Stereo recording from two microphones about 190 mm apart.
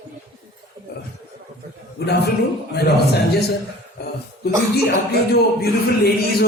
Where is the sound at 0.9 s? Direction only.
60° left (ahead or behind).